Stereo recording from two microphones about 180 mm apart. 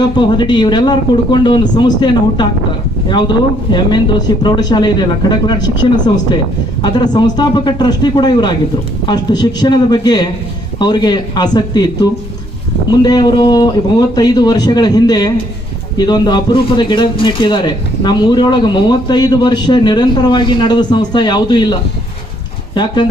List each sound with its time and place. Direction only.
0.2 s speech: 25° left (ahead or behind)
6.8 s speech: 25° left (ahead or behind)
13.0 s speech: 20° left (ahead or behind)